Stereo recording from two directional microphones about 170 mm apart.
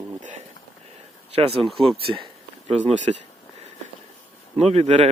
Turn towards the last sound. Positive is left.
turn(degrees=-35)  # may be behind; listen again after turning